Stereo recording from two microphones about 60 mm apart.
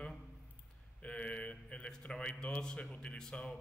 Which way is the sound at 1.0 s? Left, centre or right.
Centre.